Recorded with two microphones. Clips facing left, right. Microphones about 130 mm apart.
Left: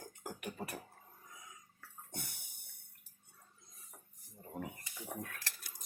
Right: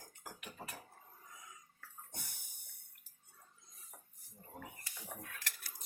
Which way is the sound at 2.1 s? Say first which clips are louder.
Left 9 dB; 65° left (ahead or behind).